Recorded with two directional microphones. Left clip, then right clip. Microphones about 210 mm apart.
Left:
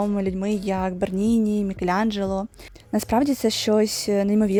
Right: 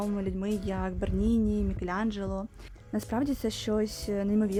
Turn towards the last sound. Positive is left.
turn(degrees=35)  # may be behind; listen again after turning